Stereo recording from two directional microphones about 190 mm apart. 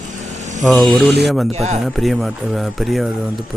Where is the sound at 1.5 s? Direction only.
35° right (ahead or behind).